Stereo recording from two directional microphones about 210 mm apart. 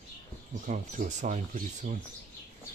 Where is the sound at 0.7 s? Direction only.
35° right (ahead or behind).